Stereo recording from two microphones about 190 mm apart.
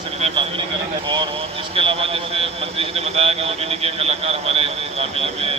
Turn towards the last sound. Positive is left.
turn(degrees=-30)  # may be behind; listen again after turning